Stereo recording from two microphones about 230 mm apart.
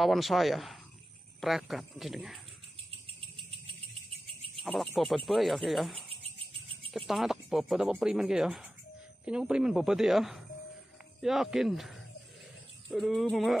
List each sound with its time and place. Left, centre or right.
0.0 s speech: centre
4.6 s speech: centre
6.0 s a sound: right
6.9 s speech: centre